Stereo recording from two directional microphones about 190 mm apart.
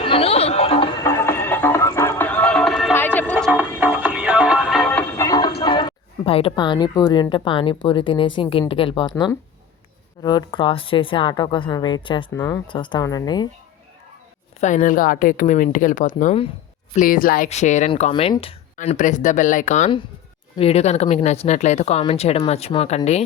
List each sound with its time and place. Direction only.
0.0 s a sound: 30° left (ahead or behind)
1.0 s music: 15° left (ahead or behind)
3.9 s music: 5° right (ahead or behind); by 9.3 s 25° left (ahead or behind)
10.2 s speech: 25° left (ahead or behind)
12.3 s speech: 15° left (ahead or behind)
14.6 s a woman's voice: 40° left (ahead or behind)
16.9 s speech: 45° left (ahead or behind); by 18.5 s 30° left (ahead or behind)
18.8 s speech: 40° left (ahead or behind)